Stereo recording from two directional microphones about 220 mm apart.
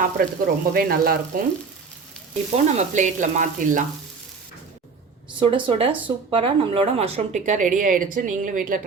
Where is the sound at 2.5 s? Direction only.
30° right (ahead or behind).